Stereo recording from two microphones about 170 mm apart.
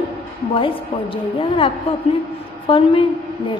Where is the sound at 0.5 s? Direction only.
30° left (ahead or behind).